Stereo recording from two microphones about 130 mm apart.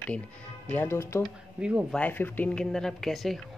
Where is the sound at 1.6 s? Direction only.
10° right (ahead or behind).